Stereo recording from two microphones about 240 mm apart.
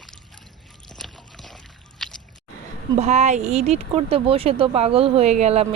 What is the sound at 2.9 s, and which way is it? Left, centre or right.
Speech, right.